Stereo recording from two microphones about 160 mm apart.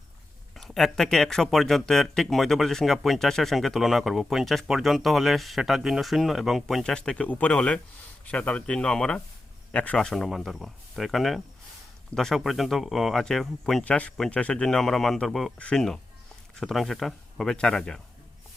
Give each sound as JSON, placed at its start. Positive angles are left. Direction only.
{"t": 0.5, "sound": "speech", "side_deg": 0}